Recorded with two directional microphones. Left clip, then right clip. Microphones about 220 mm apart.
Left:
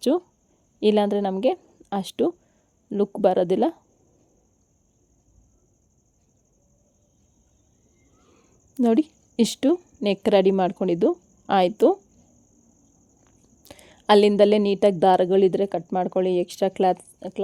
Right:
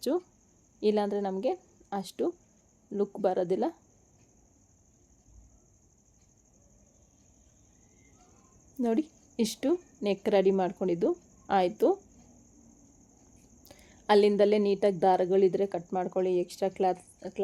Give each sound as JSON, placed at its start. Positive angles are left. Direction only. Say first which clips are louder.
{"t": 0.0, "sound": "speech", "louder": "left 8 dB", "side_deg": 35}
{"t": 8.8, "sound": "a woman's voice", "louder": "left 9 dB", "side_deg": 35}
{"t": 13.7, "sound": "speech", "louder": "left 7 dB", "side_deg": 40}